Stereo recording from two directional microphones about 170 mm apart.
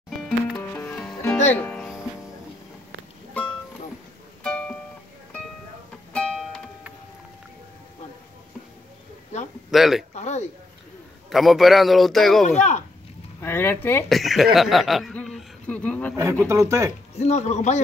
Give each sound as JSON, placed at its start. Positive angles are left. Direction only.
{"t": 0.5, "sound": "music", "side_deg": 10}
{"t": 4.4, "sound": "music", "side_deg": 5}
{"t": 6.1, "sound": "music", "side_deg": 5}
{"t": 9.7, "sound": "speech", "side_deg": 0}
{"t": 10.1, "sound": "a sound", "side_deg": 40}
{"t": 11.2, "sound": "a man's voice", "side_deg": 0}
{"t": 12.4, "sound": "speech", "side_deg": 45}
{"t": 13.4, "sound": "speech", "side_deg": 15}
{"t": 14.0, "sound": "chuckle", "side_deg": 0}
{"t": 16.2, "sound": "speech", "side_deg": -15}
{"t": 17.2, "sound": "speech", "side_deg": 40}